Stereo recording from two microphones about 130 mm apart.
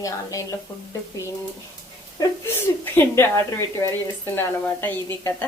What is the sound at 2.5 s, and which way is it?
A woman's voice, 15° left (ahead or behind).